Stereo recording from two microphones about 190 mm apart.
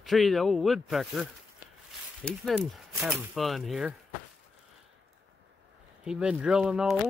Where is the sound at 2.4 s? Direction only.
Centre (ahead or behind).